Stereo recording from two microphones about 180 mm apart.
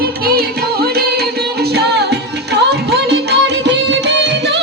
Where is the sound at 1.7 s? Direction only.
65° right (ahead or behind).